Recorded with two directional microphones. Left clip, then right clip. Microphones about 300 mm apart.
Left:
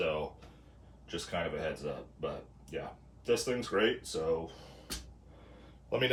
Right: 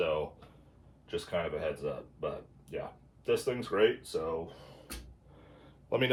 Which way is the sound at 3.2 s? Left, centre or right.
Centre.